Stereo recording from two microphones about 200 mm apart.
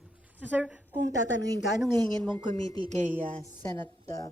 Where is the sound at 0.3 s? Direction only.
10° right (ahead or behind).